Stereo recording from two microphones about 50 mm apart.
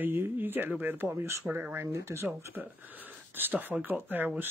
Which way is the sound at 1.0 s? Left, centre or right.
Right.